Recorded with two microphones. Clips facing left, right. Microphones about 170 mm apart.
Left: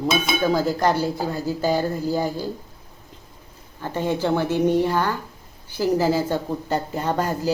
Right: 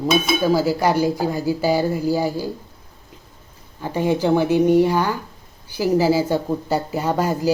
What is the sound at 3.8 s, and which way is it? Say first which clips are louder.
Speech: right 4 dB; 10° right (ahead or behind).